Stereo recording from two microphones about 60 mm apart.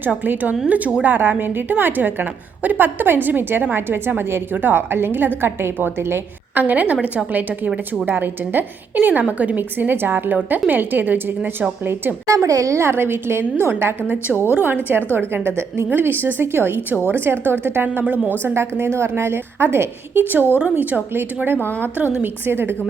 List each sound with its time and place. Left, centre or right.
0.7 s a woman's voice: right
9.7 s a woman's voice: right
12.3 s a woman's voice: right
12.8 s a woman's voice: right
18.0 s a woman's voice: centre
18.4 s a woman's voice: right
20.6 s a woman's voice: right
21.1 s a woman's voice: right